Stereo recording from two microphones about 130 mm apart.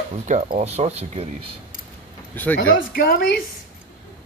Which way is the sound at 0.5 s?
55° right (ahead or behind).